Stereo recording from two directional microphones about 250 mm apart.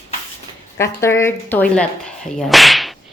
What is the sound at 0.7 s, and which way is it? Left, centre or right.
Speech, centre.